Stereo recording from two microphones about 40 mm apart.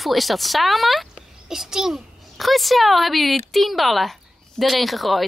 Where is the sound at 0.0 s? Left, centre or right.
Centre.